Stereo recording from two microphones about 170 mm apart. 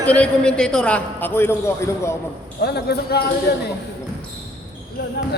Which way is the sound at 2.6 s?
70° left (ahead or behind).